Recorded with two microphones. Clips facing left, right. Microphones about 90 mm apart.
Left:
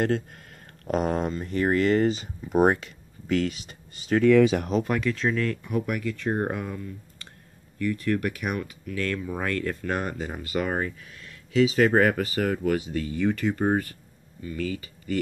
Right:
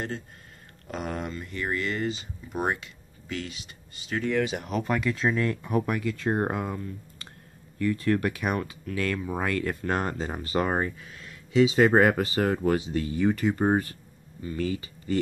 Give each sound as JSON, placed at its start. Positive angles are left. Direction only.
{"t": 0.0, "sound": "speech", "side_deg": 60}
{"t": 0.8, "sound": "speech", "side_deg": 40}
{"t": 4.8, "sound": "speech", "side_deg": -5}
{"t": 5.3, "sound": "speech", "side_deg": -20}
{"t": 5.7, "sound": "speech", "side_deg": -35}
{"t": 5.9, "sound": "speech", "side_deg": -25}
{"t": 11.5, "sound": "speech", "side_deg": -20}